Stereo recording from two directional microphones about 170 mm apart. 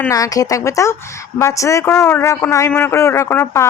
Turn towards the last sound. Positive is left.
turn(degrees=15)  # may be behind; listen again after turning